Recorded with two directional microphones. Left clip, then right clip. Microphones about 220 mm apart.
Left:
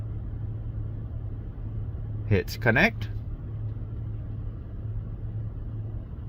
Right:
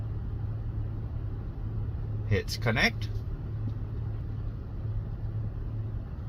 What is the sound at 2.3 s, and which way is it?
Speech, 60° left (ahead or behind).